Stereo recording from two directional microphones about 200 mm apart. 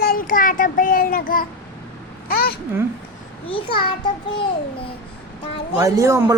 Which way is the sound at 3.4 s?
25° left (ahead or behind).